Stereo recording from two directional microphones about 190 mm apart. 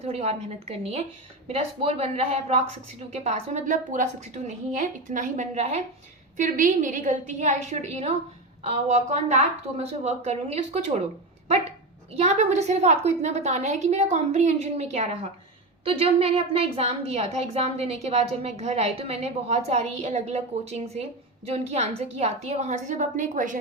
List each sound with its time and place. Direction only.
0.0 s a woman's voice: 35° right (ahead or behind)
12.1 s a woman's voice: 35° right (ahead or behind)